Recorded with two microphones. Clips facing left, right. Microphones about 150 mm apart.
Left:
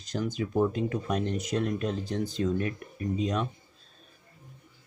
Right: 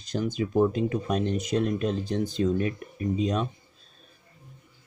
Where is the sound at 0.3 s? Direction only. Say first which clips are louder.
Right 4 dB; 20° right (ahead or behind).